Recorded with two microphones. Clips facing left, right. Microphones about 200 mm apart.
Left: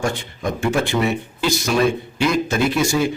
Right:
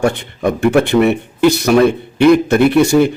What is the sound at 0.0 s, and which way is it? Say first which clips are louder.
Speech: right 8 dB; 60° right (ahead or behind).